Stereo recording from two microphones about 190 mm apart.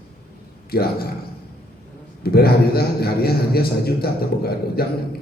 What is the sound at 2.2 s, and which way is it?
A man's voice, 55° left (ahead or behind).